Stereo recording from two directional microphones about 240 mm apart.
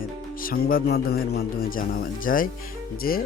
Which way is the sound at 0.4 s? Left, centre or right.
Left.